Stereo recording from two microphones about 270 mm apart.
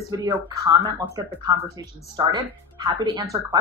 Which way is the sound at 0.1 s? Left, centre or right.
Centre.